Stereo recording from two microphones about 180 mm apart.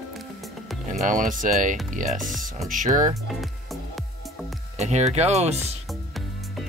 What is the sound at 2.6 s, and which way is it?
Speech, 45° right (ahead or behind).